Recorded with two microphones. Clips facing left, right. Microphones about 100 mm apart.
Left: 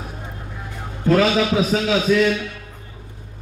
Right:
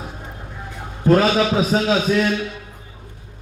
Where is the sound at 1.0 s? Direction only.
35° right (ahead or behind).